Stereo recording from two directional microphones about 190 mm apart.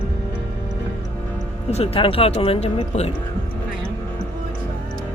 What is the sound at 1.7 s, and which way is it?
Speech, 30° left (ahead or behind).